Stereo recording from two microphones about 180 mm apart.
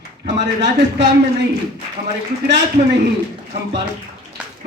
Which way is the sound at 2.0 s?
35° right (ahead or behind).